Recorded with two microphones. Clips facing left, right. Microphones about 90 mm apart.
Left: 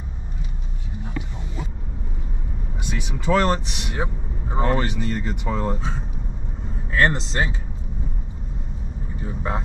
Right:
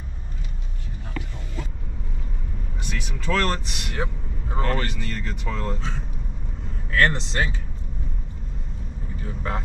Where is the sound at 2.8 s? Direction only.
15° left (ahead or behind).